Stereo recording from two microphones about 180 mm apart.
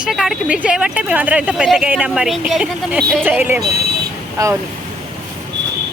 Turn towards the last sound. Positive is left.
turn(degrees=-20)  # may be behind; listen again after turning